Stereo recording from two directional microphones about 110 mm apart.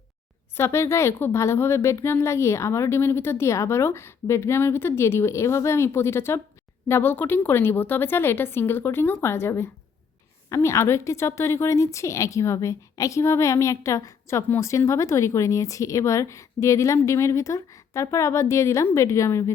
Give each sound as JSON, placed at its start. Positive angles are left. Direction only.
{"t": 0.5, "sound": "a woman's voice", "side_deg": 25}